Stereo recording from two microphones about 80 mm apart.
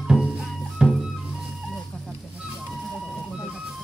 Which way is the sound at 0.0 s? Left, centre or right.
Centre.